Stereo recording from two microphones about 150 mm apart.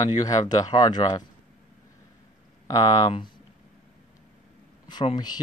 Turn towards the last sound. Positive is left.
turn(degrees=30)  # may be behind; listen again after turning